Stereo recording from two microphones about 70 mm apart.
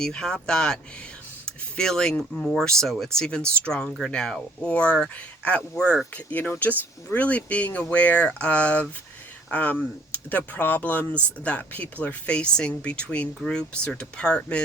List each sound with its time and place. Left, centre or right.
0.0 s speech: centre